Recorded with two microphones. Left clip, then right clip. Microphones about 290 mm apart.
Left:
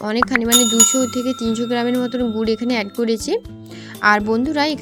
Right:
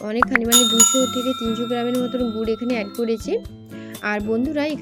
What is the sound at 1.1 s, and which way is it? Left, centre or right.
A woman's voice, left.